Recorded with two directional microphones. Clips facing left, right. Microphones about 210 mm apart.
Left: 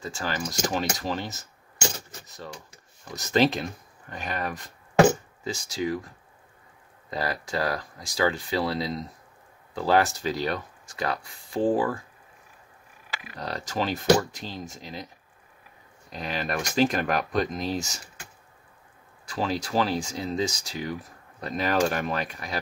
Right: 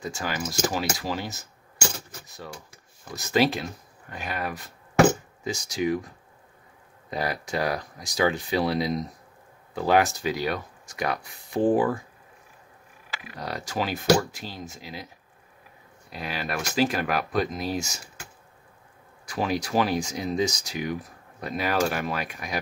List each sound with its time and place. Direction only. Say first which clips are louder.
0.0 s speech: even; 15° right (ahead or behind)
7.1 s speech: right 1 dB; 20° right (ahead or behind)
13.4 s speech: even; 10° right (ahead or behind)
16.1 s speech: left 1 dB; 5° right (ahead or behind)
19.2 s speech: right 1 dB; 15° right (ahead or behind)